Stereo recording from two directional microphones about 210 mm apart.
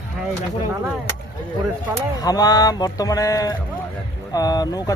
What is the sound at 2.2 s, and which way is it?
Speech, 20° left (ahead or behind).